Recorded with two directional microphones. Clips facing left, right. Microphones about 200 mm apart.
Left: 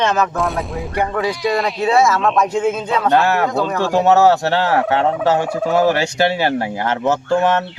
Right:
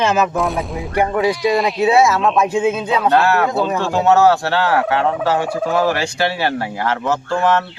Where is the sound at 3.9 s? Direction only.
15° left (ahead or behind).